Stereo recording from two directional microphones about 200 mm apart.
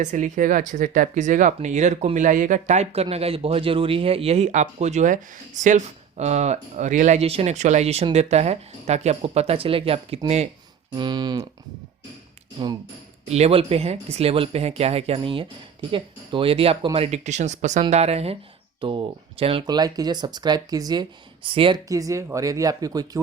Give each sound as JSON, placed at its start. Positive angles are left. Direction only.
{"t": 0.0, "sound": "speech", "side_deg": -40}
{"t": 10.9, "sound": "speech", "side_deg": -20}
{"t": 13.2, "sound": "speech", "side_deg": -35}